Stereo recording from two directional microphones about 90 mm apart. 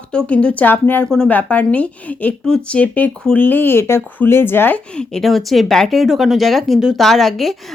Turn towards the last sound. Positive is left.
turn(degrees=0)  # may be behind; listen again after turning